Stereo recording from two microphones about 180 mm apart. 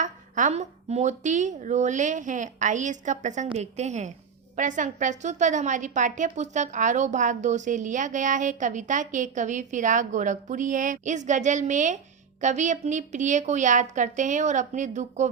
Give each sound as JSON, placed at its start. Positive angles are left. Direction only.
{"t": 0.0, "sound": "a woman's voice", "side_deg": -45}